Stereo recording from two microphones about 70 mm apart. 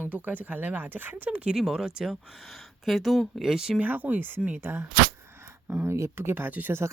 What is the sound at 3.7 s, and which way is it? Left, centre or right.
Speech, right.